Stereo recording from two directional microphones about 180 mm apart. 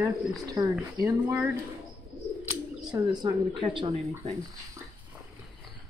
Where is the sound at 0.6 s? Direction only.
20° right (ahead or behind).